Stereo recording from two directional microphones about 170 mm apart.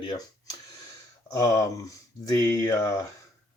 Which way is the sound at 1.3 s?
20° left (ahead or behind).